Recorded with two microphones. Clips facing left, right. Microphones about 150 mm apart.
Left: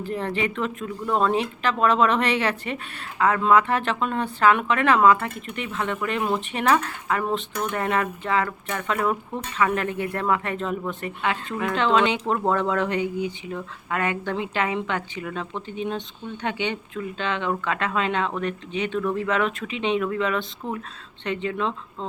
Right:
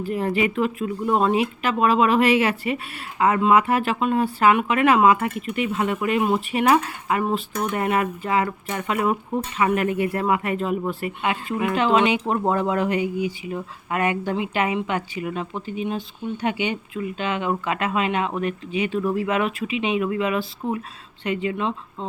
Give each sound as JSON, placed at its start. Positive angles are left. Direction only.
{"t": 0.0, "sound": "speech", "side_deg": -10}